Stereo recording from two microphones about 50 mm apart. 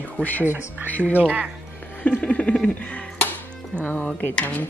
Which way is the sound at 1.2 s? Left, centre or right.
Right.